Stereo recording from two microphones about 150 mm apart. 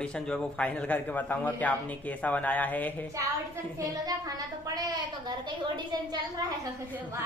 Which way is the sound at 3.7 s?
25° right (ahead or behind).